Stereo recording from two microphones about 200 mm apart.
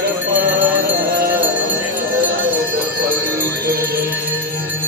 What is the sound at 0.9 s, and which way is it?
Music, 50° right (ahead or behind).